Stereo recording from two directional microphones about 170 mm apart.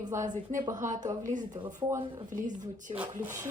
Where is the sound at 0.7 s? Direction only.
50° right (ahead or behind).